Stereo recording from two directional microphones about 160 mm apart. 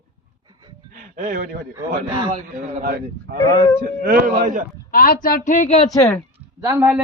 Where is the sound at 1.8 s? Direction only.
20° right (ahead or behind).